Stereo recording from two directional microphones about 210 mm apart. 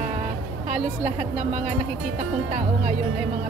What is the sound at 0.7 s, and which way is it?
Speech, 35° right (ahead or behind).